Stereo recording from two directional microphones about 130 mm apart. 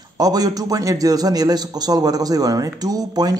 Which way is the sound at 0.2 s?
30° right (ahead or behind).